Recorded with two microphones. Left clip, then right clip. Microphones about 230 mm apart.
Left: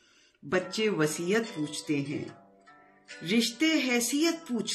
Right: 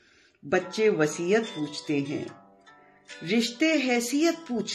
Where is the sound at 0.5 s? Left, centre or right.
Centre.